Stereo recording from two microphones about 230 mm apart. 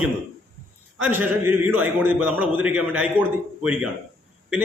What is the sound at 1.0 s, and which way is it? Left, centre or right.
A man's voice, centre.